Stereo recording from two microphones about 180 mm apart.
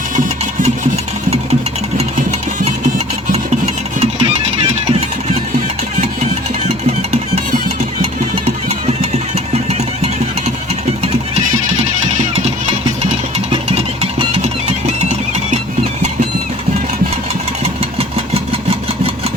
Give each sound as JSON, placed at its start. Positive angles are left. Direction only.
{"t": 2.0, "sound": "music", "side_deg": -40}
{"t": 4.0, "sound": "music", "side_deg": -35}
{"t": 6.7, "sound": "music", "side_deg": -35}
{"t": 8.4, "sound": "engine", "side_deg": -35}
{"t": 11.0, "sound": "music", "side_deg": -35}
{"t": 13.1, "sound": "music", "side_deg": -35}